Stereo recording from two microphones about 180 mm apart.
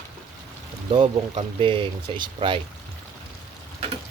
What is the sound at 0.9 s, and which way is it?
Speech, 30° right (ahead or behind).